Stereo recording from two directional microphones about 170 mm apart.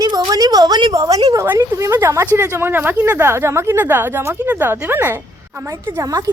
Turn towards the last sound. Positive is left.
turn(degrees=-20)  # may be behind; listen again after turning